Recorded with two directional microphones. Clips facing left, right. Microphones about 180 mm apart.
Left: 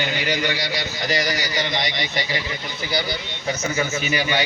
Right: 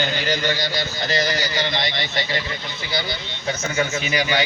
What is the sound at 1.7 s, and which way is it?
Speech, 15° left (ahead or behind).